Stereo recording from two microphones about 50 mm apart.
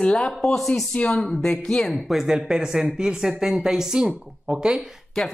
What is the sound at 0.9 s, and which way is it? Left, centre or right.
A woman's voice, centre.